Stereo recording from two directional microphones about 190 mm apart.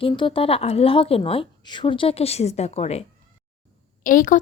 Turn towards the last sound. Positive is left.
turn(degrees=45)  # may be behind; listen again after turning